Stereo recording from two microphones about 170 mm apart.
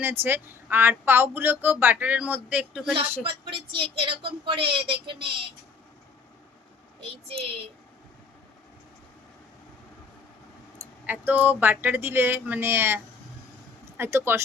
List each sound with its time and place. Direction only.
0.0 s speech: 10° right (ahead or behind)
3.2 s a woman's voice: 30° right (ahead or behind)
11.0 s speech: 10° right (ahead or behind)